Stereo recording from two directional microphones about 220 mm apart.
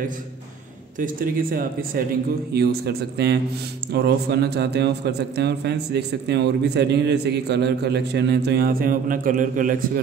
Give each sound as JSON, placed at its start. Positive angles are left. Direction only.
{"t": 0.9, "sound": "a man's voice", "side_deg": -40}